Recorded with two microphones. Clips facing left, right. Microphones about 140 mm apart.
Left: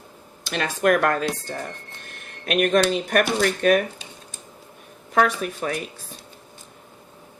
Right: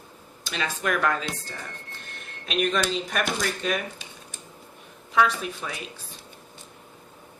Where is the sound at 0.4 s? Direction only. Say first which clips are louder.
Left 8 dB; 55° left (ahead or behind).